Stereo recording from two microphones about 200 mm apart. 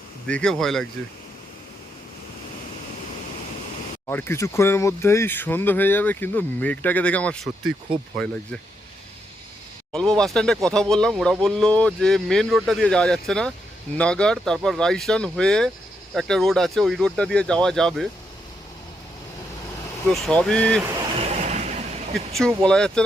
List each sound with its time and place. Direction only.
0.3 s speech: 5° left (ahead or behind)
4.0 s speech: 10° left (ahead or behind)
9.9 s speech: 5° left (ahead or behind)
20.2 s speech: 5° left (ahead or behind)
21.2 s a sound: 35° right (ahead or behind)
22.3 s speech: centre (ahead or behind)